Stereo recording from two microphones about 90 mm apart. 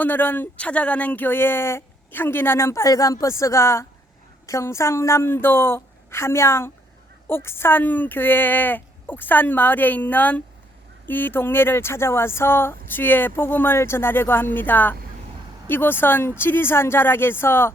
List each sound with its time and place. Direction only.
0.0 s speech: 20° left (ahead or behind)